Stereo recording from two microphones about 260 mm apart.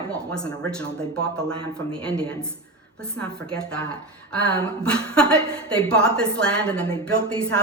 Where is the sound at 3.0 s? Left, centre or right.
Centre.